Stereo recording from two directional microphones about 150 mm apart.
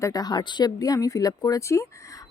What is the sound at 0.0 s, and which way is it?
Speech, 25° left (ahead or behind).